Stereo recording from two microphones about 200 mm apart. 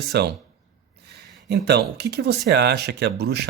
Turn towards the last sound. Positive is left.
turn(degrees=-55)  # may be behind; listen again after turning